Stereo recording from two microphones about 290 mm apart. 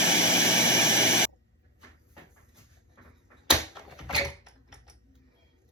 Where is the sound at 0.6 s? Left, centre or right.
Centre.